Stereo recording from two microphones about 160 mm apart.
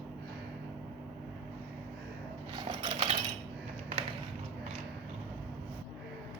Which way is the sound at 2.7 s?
35° right (ahead or behind).